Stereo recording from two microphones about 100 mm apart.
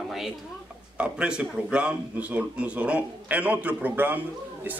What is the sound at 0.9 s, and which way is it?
A man's voice, 10° right (ahead or behind).